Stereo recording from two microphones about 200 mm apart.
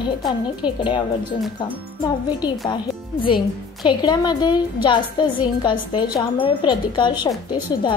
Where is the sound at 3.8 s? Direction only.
20° left (ahead or behind).